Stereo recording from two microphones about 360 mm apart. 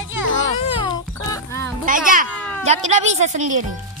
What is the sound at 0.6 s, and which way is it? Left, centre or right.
Music, centre.